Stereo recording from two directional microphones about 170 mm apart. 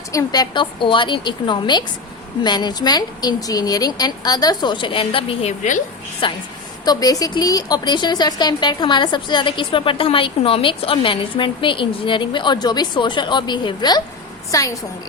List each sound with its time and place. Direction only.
0.1 s a woman's voice: 20° left (ahead or behind); by 5.8 s 45° left (ahead or behind)
6.2 s a woman's voice: 30° left (ahead or behind)